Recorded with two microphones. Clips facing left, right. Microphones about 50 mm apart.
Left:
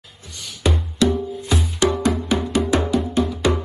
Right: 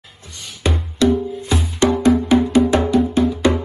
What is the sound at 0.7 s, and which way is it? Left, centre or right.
Music, right.